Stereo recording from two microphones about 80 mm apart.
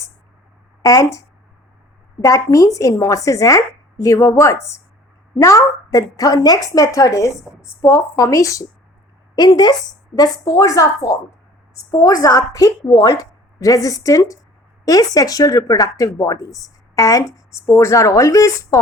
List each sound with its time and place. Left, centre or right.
0.8 s speech: left
2.2 s speech: left
9.3 s speech: left
10.4 s speech: left